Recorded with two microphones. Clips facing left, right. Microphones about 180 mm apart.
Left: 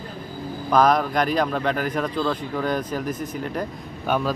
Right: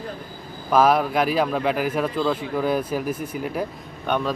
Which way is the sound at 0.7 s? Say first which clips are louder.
Right 1 dB; 5° right (ahead or behind).